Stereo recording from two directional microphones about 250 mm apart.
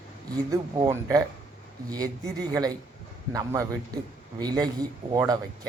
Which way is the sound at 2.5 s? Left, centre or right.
Centre.